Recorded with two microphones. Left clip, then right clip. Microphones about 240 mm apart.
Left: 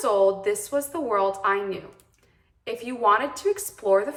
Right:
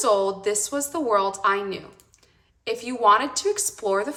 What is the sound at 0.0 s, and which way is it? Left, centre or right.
A woman's voice, centre.